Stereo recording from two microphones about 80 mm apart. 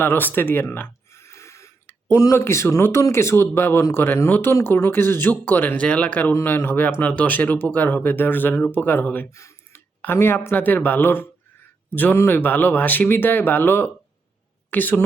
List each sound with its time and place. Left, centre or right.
0.0 s a sound: left
2.1 s speech: left
9.3 s speech: left
9.7 s a woman's voice: left